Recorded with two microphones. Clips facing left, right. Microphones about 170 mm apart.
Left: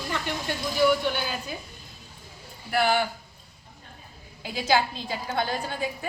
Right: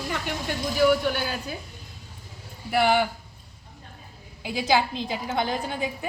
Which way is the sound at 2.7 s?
20° right (ahead or behind).